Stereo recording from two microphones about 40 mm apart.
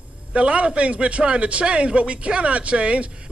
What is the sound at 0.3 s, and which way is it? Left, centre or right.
A man's voice, right.